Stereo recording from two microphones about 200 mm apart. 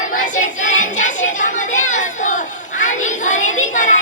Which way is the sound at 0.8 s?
40° left (ahead or behind).